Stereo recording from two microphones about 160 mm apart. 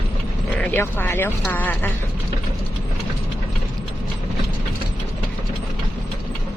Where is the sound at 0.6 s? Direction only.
10° left (ahead or behind).